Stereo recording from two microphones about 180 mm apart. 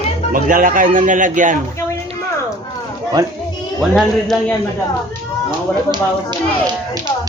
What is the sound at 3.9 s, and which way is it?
Speech, centre (ahead or behind).